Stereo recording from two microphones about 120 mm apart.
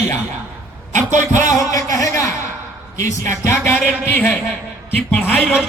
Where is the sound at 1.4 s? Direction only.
30° left (ahead or behind).